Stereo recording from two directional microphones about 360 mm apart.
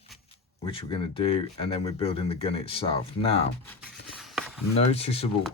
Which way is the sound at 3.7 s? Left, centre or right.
Centre.